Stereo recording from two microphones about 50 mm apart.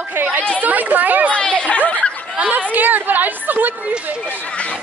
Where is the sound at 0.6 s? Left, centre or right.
Right.